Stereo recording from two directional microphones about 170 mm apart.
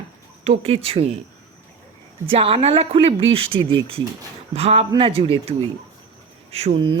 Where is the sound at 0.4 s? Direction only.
35° right (ahead or behind).